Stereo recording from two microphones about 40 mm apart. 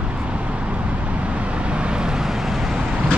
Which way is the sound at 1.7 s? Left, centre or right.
Right.